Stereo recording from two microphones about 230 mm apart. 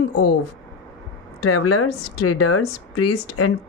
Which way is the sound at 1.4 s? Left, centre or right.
Left.